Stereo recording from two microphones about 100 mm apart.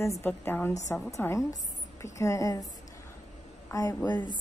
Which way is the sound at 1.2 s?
30° left (ahead or behind).